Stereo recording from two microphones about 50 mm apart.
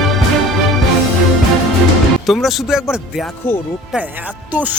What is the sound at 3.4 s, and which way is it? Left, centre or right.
Speech, left.